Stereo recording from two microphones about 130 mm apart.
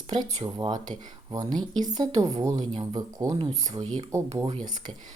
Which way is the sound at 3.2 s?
45° right (ahead or behind).